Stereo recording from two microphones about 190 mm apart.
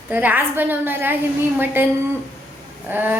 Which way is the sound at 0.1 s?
10° right (ahead or behind).